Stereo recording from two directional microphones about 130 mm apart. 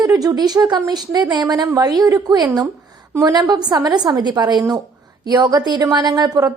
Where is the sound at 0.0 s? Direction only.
30° right (ahead or behind).